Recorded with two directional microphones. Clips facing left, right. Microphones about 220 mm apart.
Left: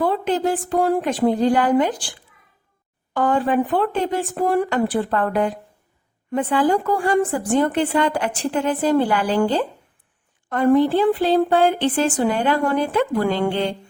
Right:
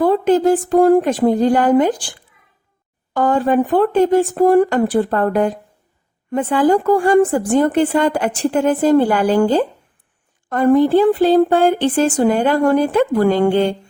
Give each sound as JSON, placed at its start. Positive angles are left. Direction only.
{"t": 0.0, "sound": "a woman's voice", "side_deg": -45}
{"t": 3.1, "sound": "a woman's voice", "side_deg": -40}